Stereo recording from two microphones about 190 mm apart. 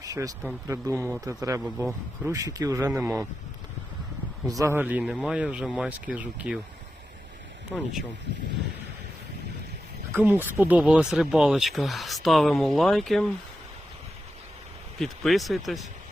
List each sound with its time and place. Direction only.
0.0 s speech: 20° right (ahead or behind)
4.4 s speech: 15° right (ahead or behind)
7.7 s speech: centre (ahead or behind)
10.1 s speech: 10° right (ahead or behind)
14.9 s speech: centre (ahead or behind)